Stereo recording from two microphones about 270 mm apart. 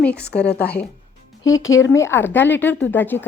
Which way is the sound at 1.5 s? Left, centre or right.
Left.